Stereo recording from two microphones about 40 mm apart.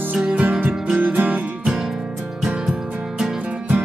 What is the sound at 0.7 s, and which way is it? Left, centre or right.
Music, right.